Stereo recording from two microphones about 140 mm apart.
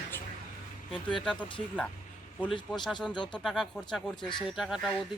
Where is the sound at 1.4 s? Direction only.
35° left (ahead or behind).